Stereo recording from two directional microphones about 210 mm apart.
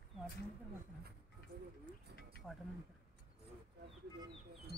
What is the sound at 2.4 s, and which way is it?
Mechanisms, centre (ahead or behind).